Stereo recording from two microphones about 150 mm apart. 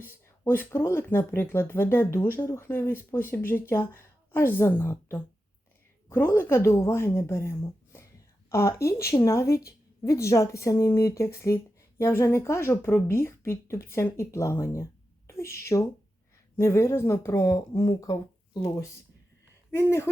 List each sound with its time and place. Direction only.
0.0 s speech: 15° left (ahead or behind)